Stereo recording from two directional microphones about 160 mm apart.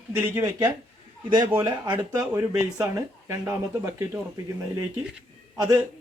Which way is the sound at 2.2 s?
15° right (ahead or behind).